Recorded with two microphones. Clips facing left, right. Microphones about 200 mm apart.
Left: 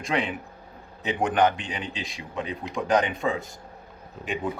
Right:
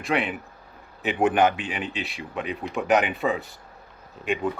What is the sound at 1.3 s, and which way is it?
Speech, 10° right (ahead or behind).